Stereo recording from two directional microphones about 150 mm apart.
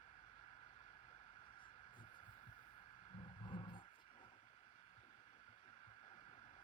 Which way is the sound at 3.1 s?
35° left (ahead or behind).